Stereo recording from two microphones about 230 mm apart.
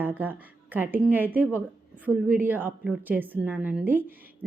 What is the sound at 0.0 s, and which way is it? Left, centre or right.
A woman's voice, centre.